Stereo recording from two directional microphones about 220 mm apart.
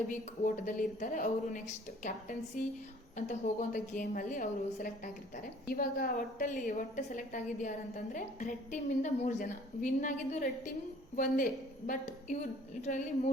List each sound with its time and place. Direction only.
0.1 s a woman's voice: 35° left (ahead or behind)
11.9 s a woman's voice: 35° left (ahead or behind)